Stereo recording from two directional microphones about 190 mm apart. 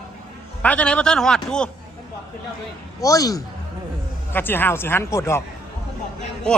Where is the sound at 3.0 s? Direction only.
20° left (ahead or behind).